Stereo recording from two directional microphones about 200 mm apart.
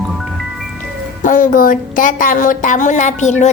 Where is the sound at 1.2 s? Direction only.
40° left (ahead or behind).